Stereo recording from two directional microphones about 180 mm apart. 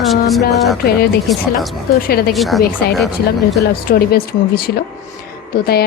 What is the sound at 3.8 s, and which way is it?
Speech, 60° left (ahead or behind).